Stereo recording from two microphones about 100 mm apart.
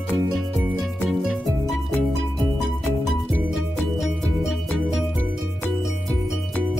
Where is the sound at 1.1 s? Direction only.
5° right (ahead or behind).